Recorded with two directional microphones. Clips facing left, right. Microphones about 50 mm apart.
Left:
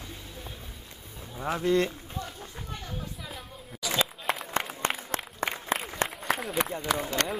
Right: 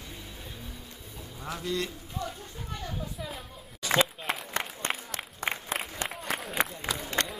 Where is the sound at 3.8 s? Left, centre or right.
Right.